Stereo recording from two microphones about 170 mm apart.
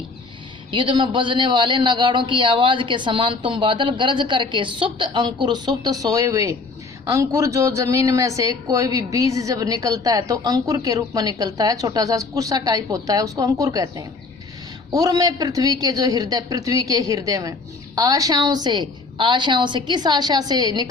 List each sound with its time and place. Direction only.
0.7 s a woman's voice: 30° right (ahead or behind)